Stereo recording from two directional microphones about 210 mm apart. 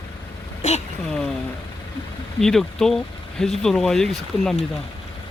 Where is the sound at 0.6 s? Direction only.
35° left (ahead or behind).